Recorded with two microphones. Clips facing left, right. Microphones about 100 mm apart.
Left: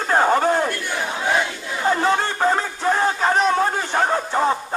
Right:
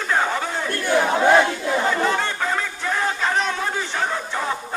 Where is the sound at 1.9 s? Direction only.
40° left (ahead or behind).